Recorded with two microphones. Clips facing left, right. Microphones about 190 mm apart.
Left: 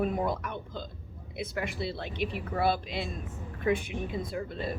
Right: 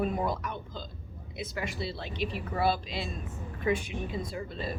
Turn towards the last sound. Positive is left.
turn(degrees=55)  # may be behind; listen again after turning